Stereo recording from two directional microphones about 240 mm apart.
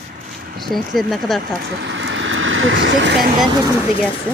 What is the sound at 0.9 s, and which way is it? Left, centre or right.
Speech, centre.